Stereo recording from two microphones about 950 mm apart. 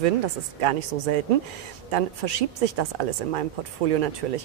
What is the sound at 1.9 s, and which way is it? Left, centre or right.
A woman's voice, right.